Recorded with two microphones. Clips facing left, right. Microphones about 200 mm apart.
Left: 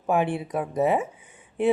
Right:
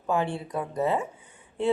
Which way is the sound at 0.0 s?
20° left (ahead or behind).